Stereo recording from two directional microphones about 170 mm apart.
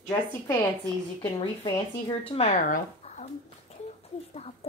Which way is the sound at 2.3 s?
40° left (ahead or behind).